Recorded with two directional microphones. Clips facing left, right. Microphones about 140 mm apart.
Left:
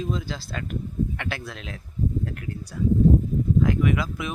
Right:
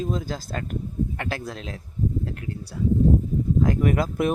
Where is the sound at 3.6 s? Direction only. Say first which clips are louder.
Right 1 dB; 40° right (ahead or behind).